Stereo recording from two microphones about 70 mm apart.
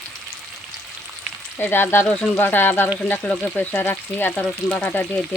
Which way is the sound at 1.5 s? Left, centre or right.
Left.